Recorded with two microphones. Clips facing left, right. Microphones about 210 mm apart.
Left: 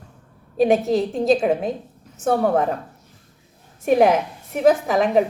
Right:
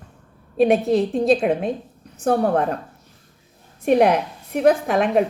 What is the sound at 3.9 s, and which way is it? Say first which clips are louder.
Speech: even; centre (ahead or behind).